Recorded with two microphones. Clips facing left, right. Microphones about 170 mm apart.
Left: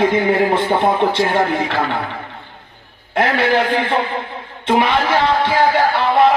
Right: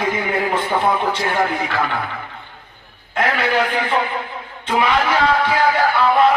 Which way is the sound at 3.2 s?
30° left (ahead or behind).